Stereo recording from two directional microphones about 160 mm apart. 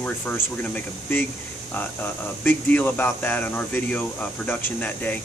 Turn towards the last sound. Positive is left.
turn(degrees=10)  # may be behind; listen again after turning